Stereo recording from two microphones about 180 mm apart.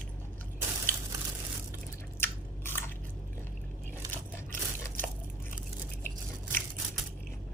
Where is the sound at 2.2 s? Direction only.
10° left (ahead or behind).